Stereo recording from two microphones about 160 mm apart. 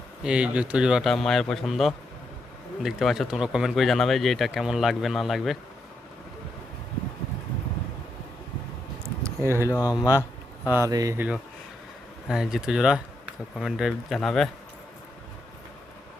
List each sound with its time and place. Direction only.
0.2 s speech: 5° right (ahead or behind)
9.0 s a sound: 15° right (ahead or behind)
9.7 s speech: 20° left (ahead or behind)
10.7 s speech: 20° right (ahead or behind)
12.3 s speech: 5° right (ahead or behind)